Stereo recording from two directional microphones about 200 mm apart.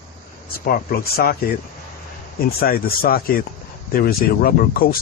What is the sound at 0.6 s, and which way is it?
Speech, 50° left (ahead or behind).